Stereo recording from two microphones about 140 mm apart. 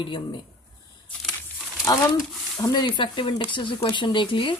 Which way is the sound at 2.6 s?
30° left (ahead or behind).